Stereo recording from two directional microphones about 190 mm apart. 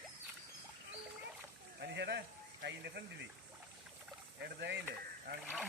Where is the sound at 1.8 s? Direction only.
60° right (ahead or behind).